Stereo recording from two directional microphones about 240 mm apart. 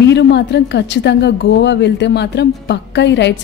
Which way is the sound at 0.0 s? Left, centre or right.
Left.